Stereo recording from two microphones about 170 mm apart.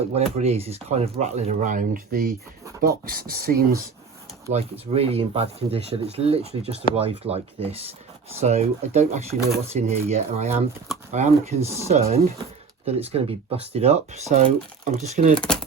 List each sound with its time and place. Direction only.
0.1 s speech: 35° right (ahead or behind); by 3.8 s 60° right (ahead or behind)
4.5 s speech: 35° right (ahead or behind)